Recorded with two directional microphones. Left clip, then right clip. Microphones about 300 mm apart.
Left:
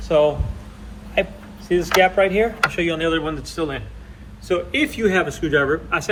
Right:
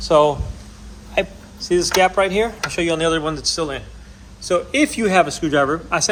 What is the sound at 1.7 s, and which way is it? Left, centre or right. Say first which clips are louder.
Speech: even; right.